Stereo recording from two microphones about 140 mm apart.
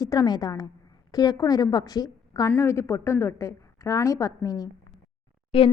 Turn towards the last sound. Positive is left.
turn(degrees=40)  # may be behind; listen again after turning